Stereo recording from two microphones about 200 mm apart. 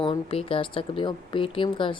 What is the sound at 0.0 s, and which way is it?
Speech, 25° left (ahead or behind).